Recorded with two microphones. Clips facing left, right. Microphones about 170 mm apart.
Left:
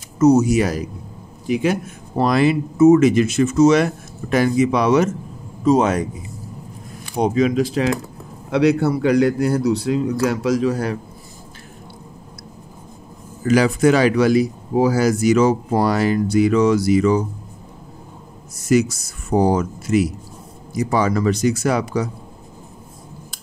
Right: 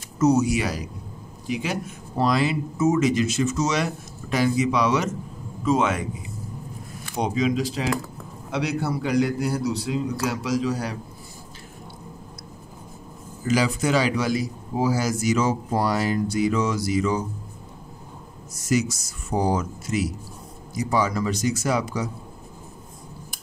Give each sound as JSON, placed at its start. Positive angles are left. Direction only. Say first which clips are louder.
{"t": 0.2, "sound": "speech", "louder": "left 6 dB", "side_deg": 45}
{"t": 5.6, "sound": "a man's voice", "louder": "left 6 dB", "side_deg": 40}
{"t": 7.2, "sound": "speech", "louder": "left 6 dB", "side_deg": 50}
{"t": 13.5, "sound": "speech", "louder": "left 7 dB", "side_deg": 60}
{"t": 18.6, "sound": "speech", "louder": "left 7 dB", "side_deg": 60}